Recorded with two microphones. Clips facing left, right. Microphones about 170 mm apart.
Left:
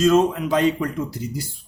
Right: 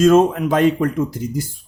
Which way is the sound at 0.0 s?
50° right (ahead or behind).